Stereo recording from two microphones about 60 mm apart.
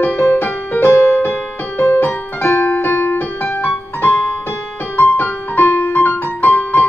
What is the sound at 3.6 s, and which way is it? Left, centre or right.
Music, left.